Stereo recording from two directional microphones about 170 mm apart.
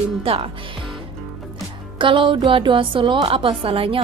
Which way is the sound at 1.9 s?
30° right (ahead or behind).